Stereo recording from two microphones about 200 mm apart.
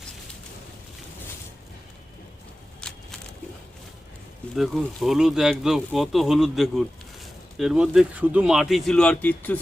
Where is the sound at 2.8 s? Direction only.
5° left (ahead or behind).